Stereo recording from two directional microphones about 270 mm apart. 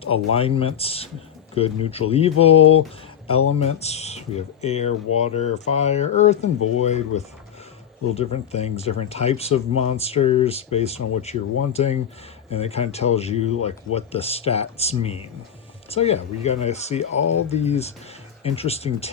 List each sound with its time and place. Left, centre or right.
0.3 s speech: left
3.3 s speech: left
3.6 s speech: left